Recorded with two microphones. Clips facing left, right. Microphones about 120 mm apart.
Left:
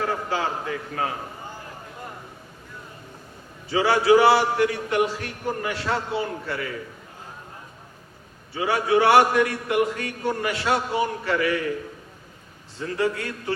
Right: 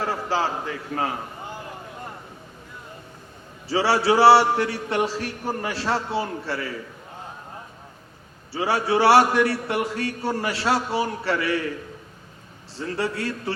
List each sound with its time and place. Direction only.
0.0 s a man's voice: 30° right (ahead or behind)
3.7 s chant: 30° right (ahead or behind)
8.5 s chant: 30° right (ahead or behind)
12.8 s chant: 30° right (ahead or behind)